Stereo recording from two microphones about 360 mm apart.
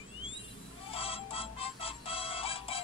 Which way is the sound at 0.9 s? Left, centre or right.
Centre.